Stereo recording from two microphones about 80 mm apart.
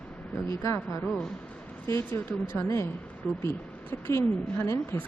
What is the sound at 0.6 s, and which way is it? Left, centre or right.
Speech, left.